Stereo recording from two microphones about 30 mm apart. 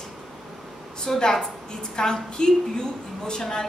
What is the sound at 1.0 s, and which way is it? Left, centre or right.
A woman's voice, centre.